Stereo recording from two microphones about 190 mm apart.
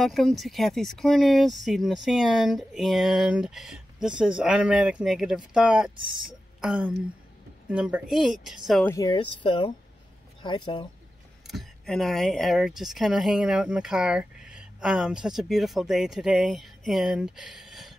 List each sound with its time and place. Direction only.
0.0 s speech: centre (ahead or behind)
8.8 s speech: 15° left (ahead or behind)
11.4 s speech: centre (ahead or behind)